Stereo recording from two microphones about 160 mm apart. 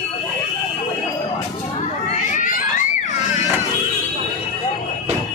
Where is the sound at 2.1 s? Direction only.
55° left (ahead or behind).